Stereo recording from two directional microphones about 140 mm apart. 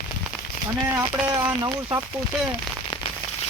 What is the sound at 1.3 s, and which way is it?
Speech, 25° right (ahead or behind).